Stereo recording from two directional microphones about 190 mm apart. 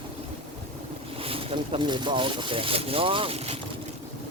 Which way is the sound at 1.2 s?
30° right (ahead or behind).